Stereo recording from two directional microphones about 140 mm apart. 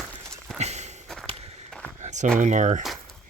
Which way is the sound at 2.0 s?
55° right (ahead or behind).